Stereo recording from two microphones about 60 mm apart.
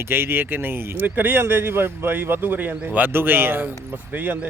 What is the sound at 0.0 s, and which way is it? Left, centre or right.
Speech, right.